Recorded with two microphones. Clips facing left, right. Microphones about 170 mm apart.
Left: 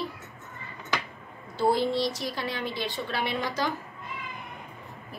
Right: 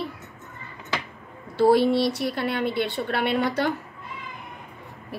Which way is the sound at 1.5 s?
65° right (ahead or behind).